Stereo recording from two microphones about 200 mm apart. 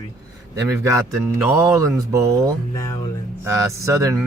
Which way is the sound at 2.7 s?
15° left (ahead or behind).